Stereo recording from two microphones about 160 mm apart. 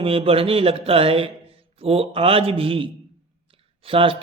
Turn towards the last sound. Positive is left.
turn(degrees=-35)  # may be behind; listen again after turning